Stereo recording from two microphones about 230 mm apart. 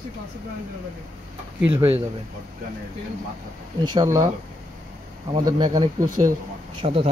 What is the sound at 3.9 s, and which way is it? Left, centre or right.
Speech, centre.